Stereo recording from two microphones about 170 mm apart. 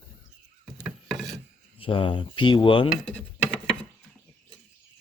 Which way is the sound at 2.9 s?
5° left (ahead or behind).